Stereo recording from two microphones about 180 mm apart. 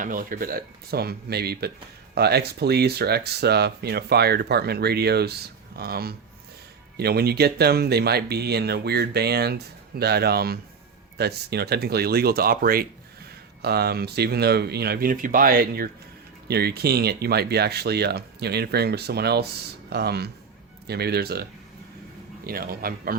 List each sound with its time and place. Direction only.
0.0 s speech: 50° right (ahead or behind)
22.4 s speech: 55° right (ahead or behind)